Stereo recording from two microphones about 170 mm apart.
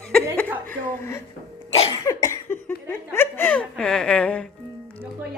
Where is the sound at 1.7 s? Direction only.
35° left (ahead or behind).